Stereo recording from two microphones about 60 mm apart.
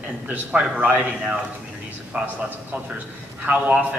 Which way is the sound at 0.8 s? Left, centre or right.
Right.